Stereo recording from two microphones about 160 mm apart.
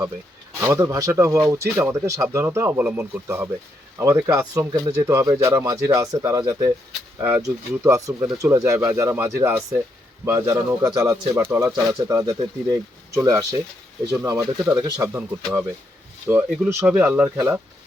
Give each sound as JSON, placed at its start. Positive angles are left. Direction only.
{"t": 0.6, "sound": "speech", "side_deg": -20}
{"t": 16.2, "sound": "speech", "side_deg": -15}